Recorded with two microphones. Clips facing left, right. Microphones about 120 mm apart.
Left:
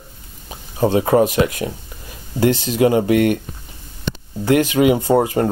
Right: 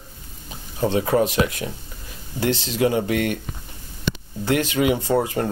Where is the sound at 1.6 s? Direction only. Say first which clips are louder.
Left 5 dB; 35° left (ahead or behind).